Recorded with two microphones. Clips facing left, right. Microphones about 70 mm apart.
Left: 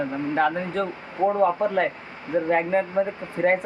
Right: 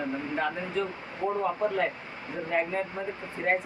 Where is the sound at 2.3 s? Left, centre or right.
Left.